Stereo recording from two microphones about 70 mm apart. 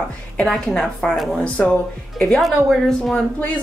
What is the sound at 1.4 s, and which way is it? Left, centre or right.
Speech, centre.